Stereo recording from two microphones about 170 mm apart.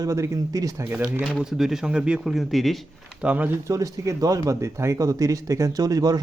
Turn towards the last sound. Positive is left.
turn(degrees=-20)  # may be behind; listen again after turning